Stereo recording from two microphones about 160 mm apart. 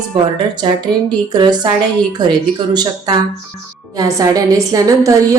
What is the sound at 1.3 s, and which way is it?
A woman's voice, 25° right (ahead or behind).